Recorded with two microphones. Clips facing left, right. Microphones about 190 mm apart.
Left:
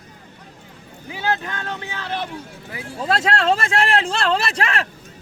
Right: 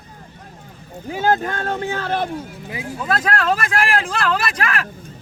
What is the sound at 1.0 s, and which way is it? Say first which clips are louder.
Speech: right 6 dB; 50° right (ahead or behind).